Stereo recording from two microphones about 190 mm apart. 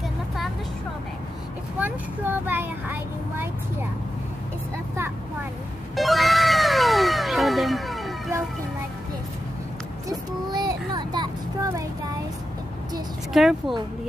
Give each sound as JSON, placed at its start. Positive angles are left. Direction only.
{"t": 1.8, "sound": "speech", "side_deg": -10}
{"t": 5.9, "sound": "cat", "side_deg": 0}
{"t": 10.0, "sound": "vehicle", "side_deg": -20}
{"t": 13.3, "sound": "speech", "side_deg": 0}